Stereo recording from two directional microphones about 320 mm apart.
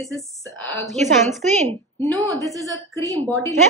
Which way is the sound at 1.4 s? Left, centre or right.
Right.